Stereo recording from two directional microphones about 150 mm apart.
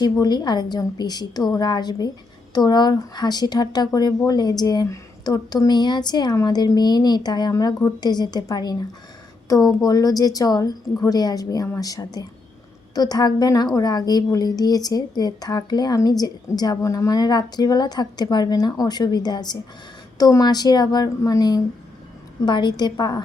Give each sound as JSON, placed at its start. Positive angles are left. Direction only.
{"t": 0.0, "sound": "speech", "side_deg": 30}